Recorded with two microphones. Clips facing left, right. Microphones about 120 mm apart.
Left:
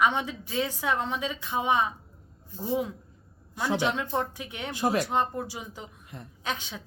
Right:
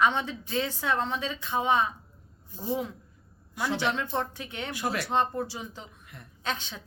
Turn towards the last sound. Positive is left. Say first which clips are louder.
# even
turn(degrees=10)  # may be behind; listen again after turning